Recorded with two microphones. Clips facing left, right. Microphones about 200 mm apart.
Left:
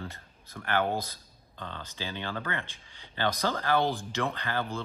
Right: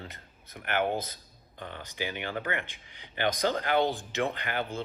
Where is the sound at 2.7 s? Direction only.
15° right (ahead or behind).